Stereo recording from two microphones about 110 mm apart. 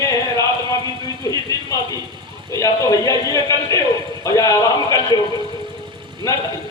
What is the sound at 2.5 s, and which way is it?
A man's voice, 30° left (ahead or behind).